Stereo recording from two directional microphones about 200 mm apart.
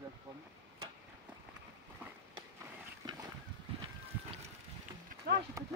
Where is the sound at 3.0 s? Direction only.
20° right (ahead or behind).